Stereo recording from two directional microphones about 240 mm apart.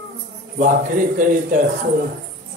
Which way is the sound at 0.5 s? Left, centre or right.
Right.